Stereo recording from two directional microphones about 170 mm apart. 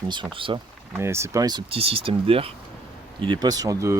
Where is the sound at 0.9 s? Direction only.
15° right (ahead or behind).